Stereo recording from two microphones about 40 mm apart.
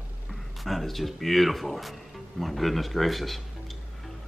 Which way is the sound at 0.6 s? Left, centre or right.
Centre.